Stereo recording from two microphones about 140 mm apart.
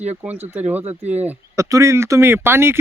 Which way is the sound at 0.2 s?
10° right (ahead or behind).